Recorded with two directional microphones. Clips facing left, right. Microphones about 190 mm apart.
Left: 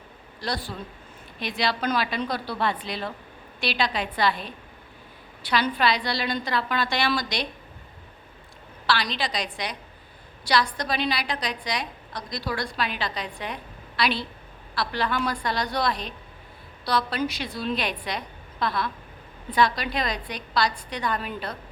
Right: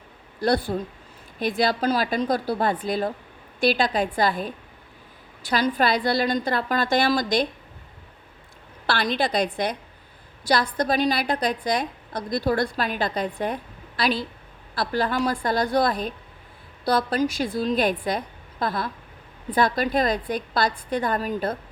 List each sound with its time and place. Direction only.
0.3 s a woman's voice: 55° right (ahead or behind)
1.8 s a woman's voice: 35° right (ahead or behind)
8.9 s a woman's voice: 50° right (ahead or behind)